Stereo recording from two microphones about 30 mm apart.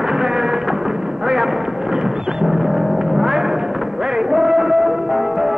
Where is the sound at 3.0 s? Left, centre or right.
Centre.